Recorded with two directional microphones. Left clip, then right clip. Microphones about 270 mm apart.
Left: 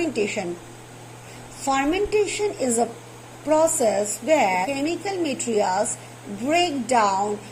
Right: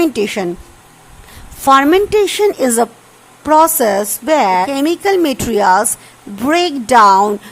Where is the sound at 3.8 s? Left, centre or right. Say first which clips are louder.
Right 7 dB; right.